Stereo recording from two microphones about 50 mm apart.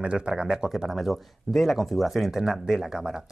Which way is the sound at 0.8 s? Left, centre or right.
Centre.